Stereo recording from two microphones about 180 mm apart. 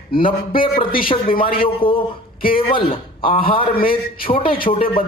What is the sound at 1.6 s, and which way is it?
A man's voice, 30° left (ahead or behind).